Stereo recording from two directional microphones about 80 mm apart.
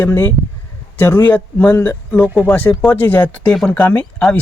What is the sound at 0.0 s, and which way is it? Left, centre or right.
Speech, left.